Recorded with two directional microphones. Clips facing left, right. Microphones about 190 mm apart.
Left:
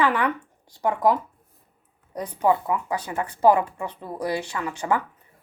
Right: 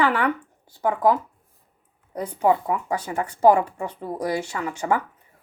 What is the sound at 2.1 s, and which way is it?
Speech, 10° right (ahead or behind).